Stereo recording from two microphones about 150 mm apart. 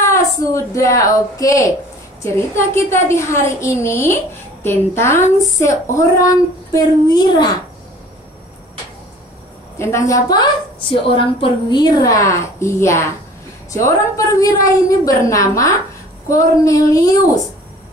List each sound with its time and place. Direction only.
0.1 s a woman's voice: 20° left (ahead or behind)
9.8 s a woman's voice: 20° left (ahead or behind)